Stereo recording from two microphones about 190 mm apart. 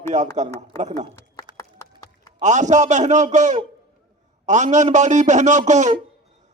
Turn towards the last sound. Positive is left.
turn(degrees=-40)  # may be behind; listen again after turning